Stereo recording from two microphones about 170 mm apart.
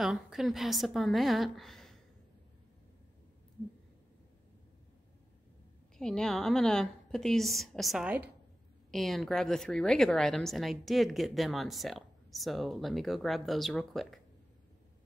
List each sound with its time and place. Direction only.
0.0 s a woman's voice: centre (ahead or behind)
5.9 s a woman's voice: 5° left (ahead or behind)